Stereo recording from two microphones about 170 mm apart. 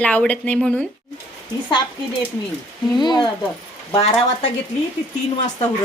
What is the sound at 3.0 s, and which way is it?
Speech, 25° left (ahead or behind).